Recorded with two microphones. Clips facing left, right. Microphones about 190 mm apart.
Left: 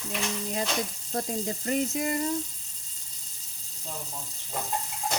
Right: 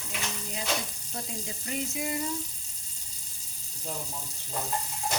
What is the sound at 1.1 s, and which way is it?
Speech, 50° left (ahead or behind).